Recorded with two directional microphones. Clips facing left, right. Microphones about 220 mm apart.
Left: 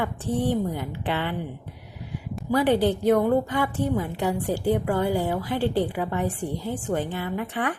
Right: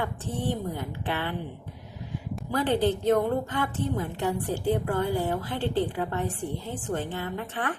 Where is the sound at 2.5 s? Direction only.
10° left (ahead or behind).